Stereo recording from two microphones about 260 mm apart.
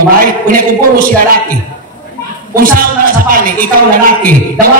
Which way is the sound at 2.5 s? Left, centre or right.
Right.